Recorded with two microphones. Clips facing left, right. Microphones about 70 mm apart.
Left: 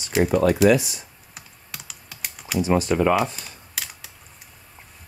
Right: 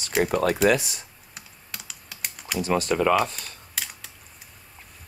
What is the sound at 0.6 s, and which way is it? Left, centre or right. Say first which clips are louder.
Speech: left 4 dB; right.